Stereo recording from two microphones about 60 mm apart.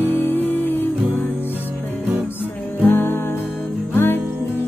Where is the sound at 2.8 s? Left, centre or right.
Left.